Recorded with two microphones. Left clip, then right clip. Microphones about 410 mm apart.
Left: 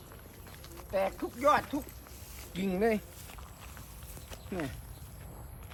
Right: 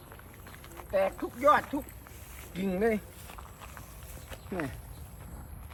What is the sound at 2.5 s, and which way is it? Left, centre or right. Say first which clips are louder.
Walk: right 1 dB; centre.